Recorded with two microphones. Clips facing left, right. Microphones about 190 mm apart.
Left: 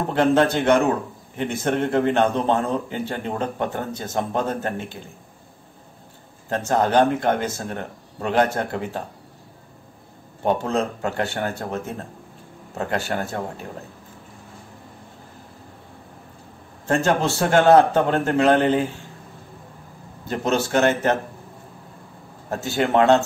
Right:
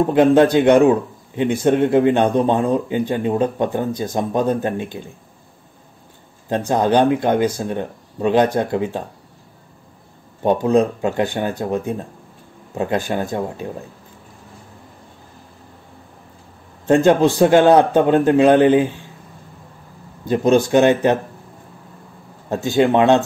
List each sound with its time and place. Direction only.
0.1 s a man's voice: 15° right (ahead or behind)
6.5 s a man's voice: 15° right (ahead or behind)
10.6 s a man's voice: 15° right (ahead or behind)
16.8 s a man's voice: 15° right (ahead or behind)
20.2 s a man's voice: 15° right (ahead or behind)
22.5 s a man's voice: 20° right (ahead or behind)